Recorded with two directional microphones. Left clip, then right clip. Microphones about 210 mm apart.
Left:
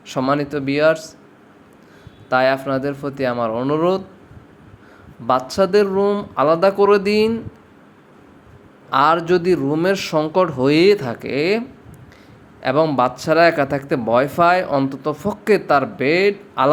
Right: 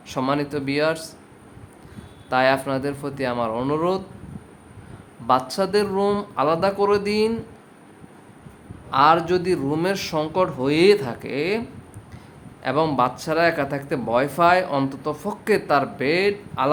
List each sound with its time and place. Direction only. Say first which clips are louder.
0.1 s speech: left 4 dB; 15° left (ahead or behind)
2.3 s speech: left 3 dB; 15° left (ahead or behind)
5.2 s speech: left 3 dB; 15° left (ahead or behind)
8.9 s speech: left 2 dB; 20° left (ahead or behind)
12.6 s speech: left 4 dB; 10° left (ahead or behind)